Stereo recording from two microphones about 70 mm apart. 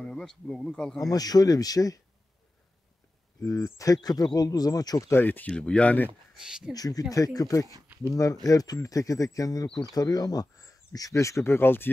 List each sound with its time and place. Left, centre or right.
0.0 s speech: centre
0.9 s speech: left
3.4 s speech: left
5.1 s speech: left
5.5 s speech: centre
6.4 s speech: centre
6.7 s speech: left